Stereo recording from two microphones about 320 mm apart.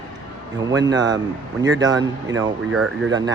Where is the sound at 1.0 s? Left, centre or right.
Centre.